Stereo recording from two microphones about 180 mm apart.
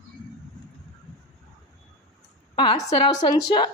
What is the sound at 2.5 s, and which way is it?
A woman's voice, 25° left (ahead or behind).